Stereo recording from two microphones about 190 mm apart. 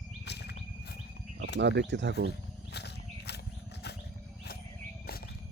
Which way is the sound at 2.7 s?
60° left (ahead or behind).